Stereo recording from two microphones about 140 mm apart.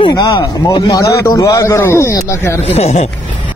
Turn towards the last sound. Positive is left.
turn(degrees=50)  # may be behind; listen again after turning